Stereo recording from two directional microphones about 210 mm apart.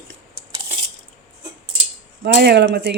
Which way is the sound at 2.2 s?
50° right (ahead or behind).